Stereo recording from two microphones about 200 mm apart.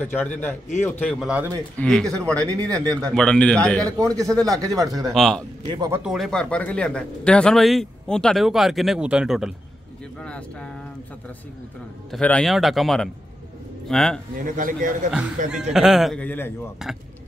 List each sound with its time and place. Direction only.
0.0 s a man's voice: 10° left (ahead or behind)
1.2 s speech: 5° right (ahead or behind)
1.8 s a man's voice: 5° left (ahead or behind)
2.4 s speech: 15° right (ahead or behind)
3.1 s a man's voice: 5° left (ahead or behind)
3.8 s speech: 15° right (ahead or behind)
5.1 s a man's voice: centre (ahead or behind)
5.7 s speech: 20° right (ahead or behind)
6.0 s a man's voice: centre (ahead or behind)
12.1 s a man's voice: 5° left (ahead or behind)
14.3 s a man's voice: 40° right (ahead or behind)
15.0 s a man's voice: 5° right (ahead or behind)
16.8 s a man's voice: centre (ahead or behind)